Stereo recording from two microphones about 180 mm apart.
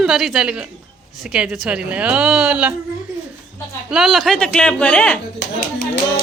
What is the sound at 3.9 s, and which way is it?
Speech, centre (ahead or behind).